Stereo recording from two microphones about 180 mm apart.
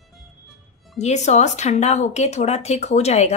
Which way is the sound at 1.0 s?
40° left (ahead or behind).